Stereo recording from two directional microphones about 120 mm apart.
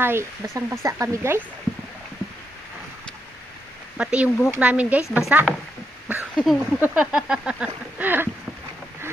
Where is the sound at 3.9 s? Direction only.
10° right (ahead or behind).